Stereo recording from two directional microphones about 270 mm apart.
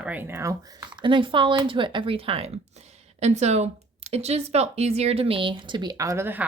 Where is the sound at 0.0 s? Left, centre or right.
Centre.